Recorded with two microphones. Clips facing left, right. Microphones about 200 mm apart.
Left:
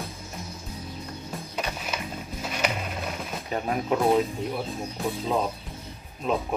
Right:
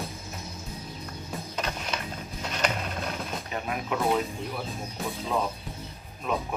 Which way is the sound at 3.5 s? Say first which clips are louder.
Left 6 dB; 35° left (ahead or behind).